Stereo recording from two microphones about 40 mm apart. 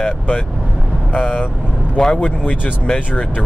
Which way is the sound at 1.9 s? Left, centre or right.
Left.